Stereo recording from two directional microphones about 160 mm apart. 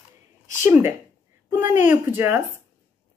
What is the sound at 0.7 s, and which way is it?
Speech, 15° right (ahead or behind).